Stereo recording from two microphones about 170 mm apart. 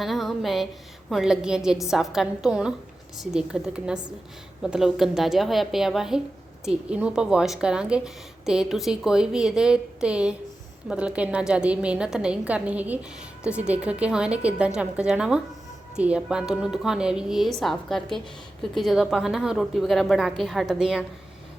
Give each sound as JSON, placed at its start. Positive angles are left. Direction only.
{"t": 0.0, "sound": "a woman's voice", "side_deg": 0}